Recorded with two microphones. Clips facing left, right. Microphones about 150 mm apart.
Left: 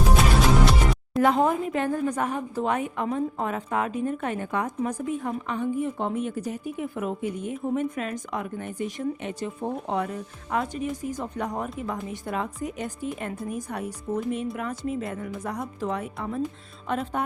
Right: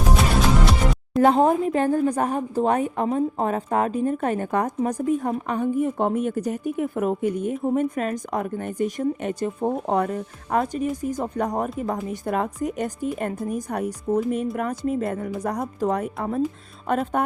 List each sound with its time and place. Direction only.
0.6 s music: centre (ahead or behind)
1.2 s a woman's voice: 35° right (ahead or behind)